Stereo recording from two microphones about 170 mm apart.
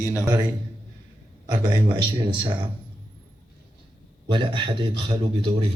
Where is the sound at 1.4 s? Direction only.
25° right (ahead or behind).